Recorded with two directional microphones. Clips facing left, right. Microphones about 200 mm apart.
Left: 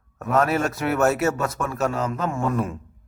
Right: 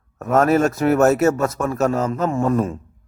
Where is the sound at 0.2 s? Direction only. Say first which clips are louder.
Right 5 dB; 45° right (ahead or behind).